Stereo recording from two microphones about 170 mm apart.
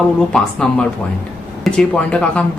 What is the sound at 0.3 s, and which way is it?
Speech, 5° left (ahead or behind).